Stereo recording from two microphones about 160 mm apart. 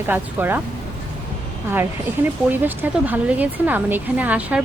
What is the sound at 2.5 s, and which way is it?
Speech, 10° right (ahead or behind).